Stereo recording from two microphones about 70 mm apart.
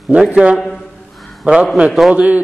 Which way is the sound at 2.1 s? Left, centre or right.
Right.